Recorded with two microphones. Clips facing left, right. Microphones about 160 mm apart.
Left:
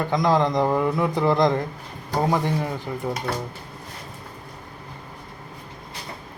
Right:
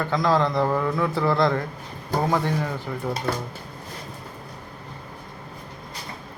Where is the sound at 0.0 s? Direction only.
15° left (ahead or behind).